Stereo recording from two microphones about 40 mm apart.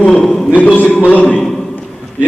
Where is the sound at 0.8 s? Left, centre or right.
Left.